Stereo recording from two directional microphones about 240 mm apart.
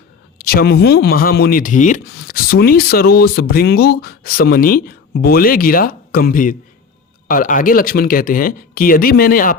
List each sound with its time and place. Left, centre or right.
0.3 s speech: left